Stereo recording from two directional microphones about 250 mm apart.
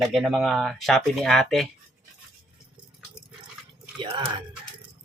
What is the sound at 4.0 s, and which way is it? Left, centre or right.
Speech, centre.